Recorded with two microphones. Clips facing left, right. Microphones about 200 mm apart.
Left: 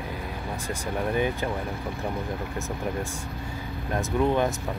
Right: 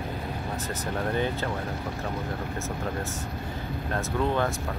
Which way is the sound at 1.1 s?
15° left (ahead or behind).